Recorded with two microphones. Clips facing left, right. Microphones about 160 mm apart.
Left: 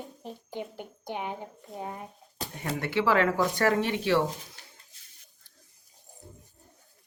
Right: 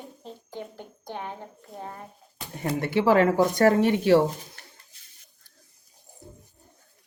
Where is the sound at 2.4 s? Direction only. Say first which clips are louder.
Left 3 dB; 40° left (ahead or behind).